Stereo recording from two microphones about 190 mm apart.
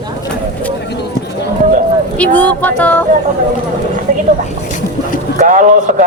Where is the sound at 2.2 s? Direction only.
10° left (ahead or behind).